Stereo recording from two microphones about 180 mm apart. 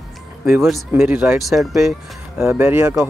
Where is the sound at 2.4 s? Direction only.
15° right (ahead or behind).